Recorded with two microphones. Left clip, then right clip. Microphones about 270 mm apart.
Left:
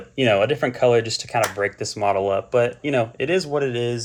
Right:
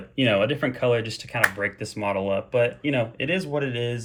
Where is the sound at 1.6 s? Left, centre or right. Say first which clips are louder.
Left 5 dB; left.